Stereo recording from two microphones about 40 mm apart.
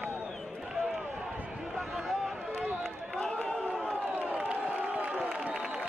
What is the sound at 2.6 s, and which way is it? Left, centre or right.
Run, right.